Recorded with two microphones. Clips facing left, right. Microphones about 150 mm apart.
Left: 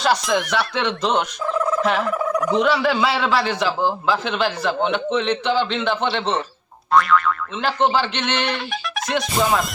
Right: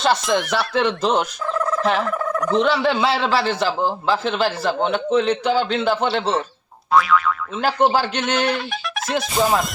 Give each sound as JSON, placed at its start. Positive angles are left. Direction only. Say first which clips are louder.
{"t": 0.0, "sound": "fowl", "louder": "right 1 dB", "side_deg": 0}
{"t": 1.5, "sound": "fowl", "louder": "even", "side_deg": 5}
{"t": 2.8, "sound": "a man's voice", "louder": "even", "side_deg": -25}
{"t": 3.2, "sound": "fowl", "louder": "right 1 dB", "side_deg": 0}
{"t": 5.4, "sound": "a man's voice", "louder": "right 1 dB", "side_deg": -40}
{"t": 6.9, "sound": "fowl", "louder": "even", "side_deg": 0}
{"t": 7.9, "sound": "speech", "louder": "right 1 dB", "side_deg": -40}
{"t": 8.2, "sound": "fowl", "louder": "right 3 dB", "side_deg": -5}